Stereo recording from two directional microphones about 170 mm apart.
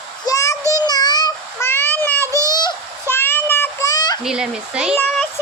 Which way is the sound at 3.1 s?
10° left (ahead or behind).